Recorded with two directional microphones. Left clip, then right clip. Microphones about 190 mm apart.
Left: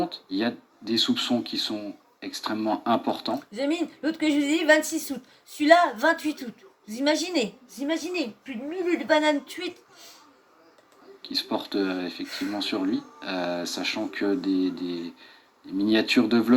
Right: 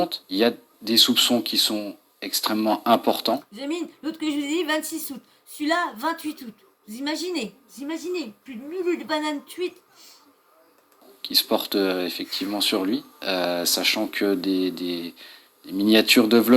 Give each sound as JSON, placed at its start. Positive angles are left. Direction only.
{"t": 0.0, "sound": "speech", "side_deg": -50}
{"t": 3.5, "sound": "speech", "side_deg": 0}
{"t": 11.2, "sound": "speech", "side_deg": -50}